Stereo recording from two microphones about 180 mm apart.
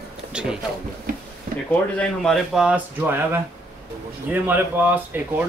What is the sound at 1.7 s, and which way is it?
Speech, 5° left (ahead or behind).